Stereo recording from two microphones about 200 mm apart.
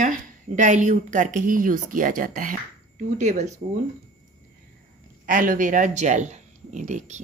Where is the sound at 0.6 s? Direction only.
35° right (ahead or behind).